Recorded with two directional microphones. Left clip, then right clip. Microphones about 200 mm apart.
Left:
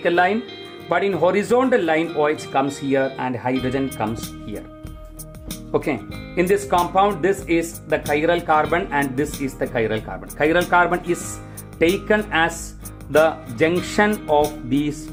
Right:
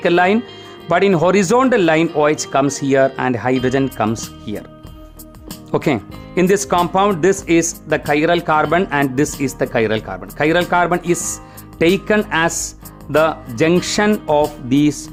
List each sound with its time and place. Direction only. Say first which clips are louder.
0.0 s speech: right 4 dB; 45° right (ahead or behind)
5.7 s speech: right 4 dB; 50° right (ahead or behind)